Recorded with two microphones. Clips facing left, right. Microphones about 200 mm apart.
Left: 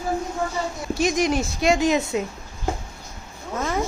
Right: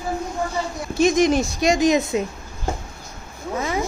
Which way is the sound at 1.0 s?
20° right (ahead or behind).